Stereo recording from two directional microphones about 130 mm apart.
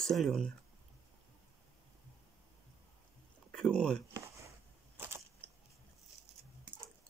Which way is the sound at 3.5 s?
5° left (ahead or behind).